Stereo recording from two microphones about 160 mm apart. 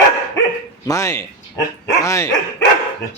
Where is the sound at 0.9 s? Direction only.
20° left (ahead or behind).